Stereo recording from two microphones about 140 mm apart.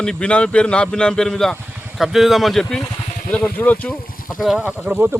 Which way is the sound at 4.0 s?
90° left.